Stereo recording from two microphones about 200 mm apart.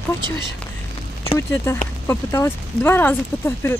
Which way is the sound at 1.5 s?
10° left (ahead or behind).